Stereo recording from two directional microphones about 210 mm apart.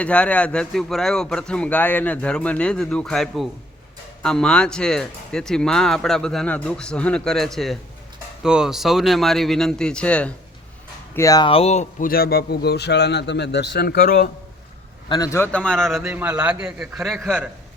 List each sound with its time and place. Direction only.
0.0 s speech: 5° left (ahead or behind); by 14.3 s 45° left (ahead or behind)
15.1 s speech: 15° left (ahead or behind); by 17.5 s 5° right (ahead or behind)